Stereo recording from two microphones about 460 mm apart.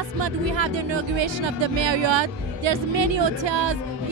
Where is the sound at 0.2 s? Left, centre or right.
Right.